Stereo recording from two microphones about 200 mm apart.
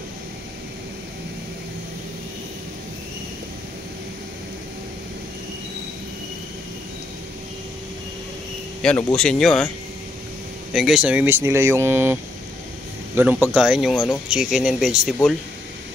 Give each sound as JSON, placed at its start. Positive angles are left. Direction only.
{"t": 8.8, "sound": "speech", "side_deg": 5}
{"t": 10.7, "sound": "speech", "side_deg": 0}